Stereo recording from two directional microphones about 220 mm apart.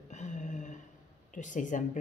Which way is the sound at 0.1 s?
35° left (ahead or behind).